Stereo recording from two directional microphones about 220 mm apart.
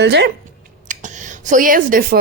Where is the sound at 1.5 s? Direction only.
35° right (ahead or behind).